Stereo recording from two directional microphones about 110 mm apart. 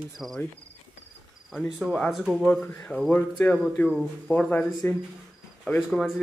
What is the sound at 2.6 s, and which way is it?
Speech, 20° left (ahead or behind).